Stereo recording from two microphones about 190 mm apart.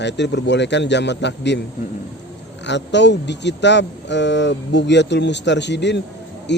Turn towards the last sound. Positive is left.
turn(degrees=65)  # may be behind; listen again after turning